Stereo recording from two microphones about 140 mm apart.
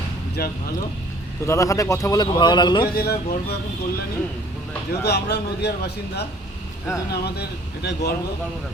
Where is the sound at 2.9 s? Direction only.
90° left.